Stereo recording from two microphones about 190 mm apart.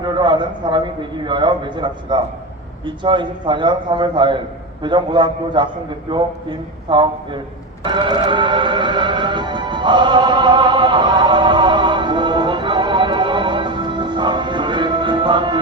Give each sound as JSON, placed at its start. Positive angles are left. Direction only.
{"t": 0.0, "sound": "a man's voice", "side_deg": -25}
{"t": 7.9, "sound": "music", "side_deg": -25}